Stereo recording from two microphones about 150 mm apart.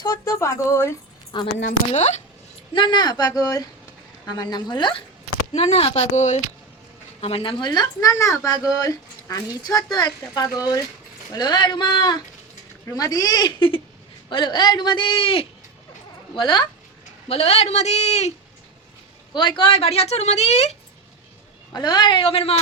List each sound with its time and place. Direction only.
0.0 s speech: 25° left (ahead or behind)
1.3 s a man's voice: 30° left (ahead or behind)
1.9 s speech: 50° left (ahead or behind)
2.7 s speech: 30° left (ahead or behind)
5.5 s a man's voice: 40° left (ahead or behind)
19.3 s speech: 30° left (ahead or behind); by 20.7 s 45° left (ahead or behind)
21.7 s a man's voice: 30° left (ahead or behind)